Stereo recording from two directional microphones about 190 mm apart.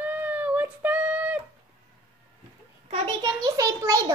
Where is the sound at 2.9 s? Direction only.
25° right (ahead or behind).